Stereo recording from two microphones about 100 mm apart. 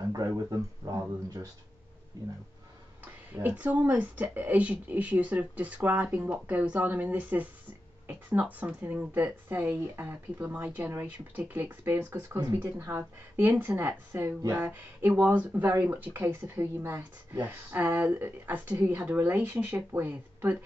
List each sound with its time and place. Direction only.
0.3 s speech: 30° right (ahead or behind)
2.1 s speech: 35° right (ahead or behind)
3.4 s speech: 15° right (ahead or behind)